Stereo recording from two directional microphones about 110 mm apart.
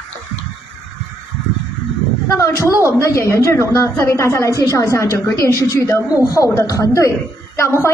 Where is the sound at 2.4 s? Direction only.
25° left (ahead or behind).